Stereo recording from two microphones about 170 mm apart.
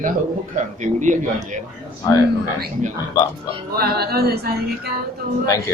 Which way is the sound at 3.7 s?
65° right (ahead or behind).